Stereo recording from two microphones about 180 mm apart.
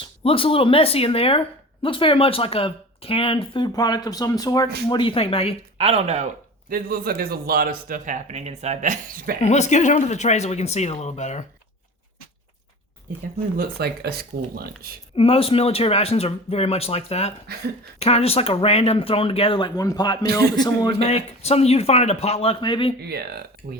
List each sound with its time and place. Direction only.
0.2 s speech: 30° left (ahead or behind)
5.7 s speech: 35° right (ahead or behind)
6.7 s a man's voice: 55° right (ahead or behind)
9.4 s speech: 40° left (ahead or behind)
13.6 s speech: 60° right (ahead or behind)
15.1 s speech: 30° left (ahead or behind)
21.0 s speech: 35° left (ahead or behind)
23.0 s a man's voice: 60° right (ahead or behind)